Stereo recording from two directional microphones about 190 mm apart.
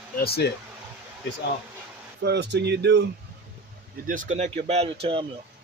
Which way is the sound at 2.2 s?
65° right (ahead or behind).